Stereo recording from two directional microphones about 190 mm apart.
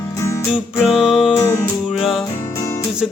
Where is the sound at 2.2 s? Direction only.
15° left (ahead or behind).